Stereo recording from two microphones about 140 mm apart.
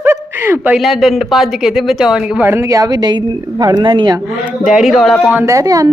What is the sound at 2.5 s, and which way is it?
A woman's voice, 20° right (ahead or behind).